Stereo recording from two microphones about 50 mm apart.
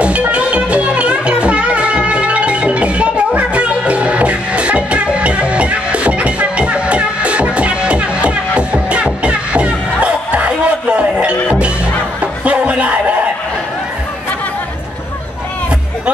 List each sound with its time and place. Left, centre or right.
0.0 s music: right